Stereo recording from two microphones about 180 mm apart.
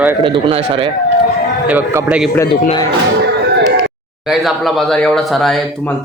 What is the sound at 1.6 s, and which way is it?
Speech, 10° right (ahead or behind).